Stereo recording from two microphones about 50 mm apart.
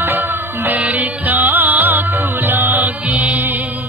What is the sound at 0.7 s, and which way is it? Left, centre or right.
Music, right.